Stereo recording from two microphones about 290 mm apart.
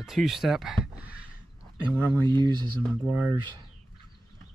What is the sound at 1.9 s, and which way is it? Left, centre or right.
Speech, centre.